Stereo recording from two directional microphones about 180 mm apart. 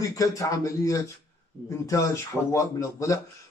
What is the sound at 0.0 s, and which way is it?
A man's voice, 20° left (ahead or behind).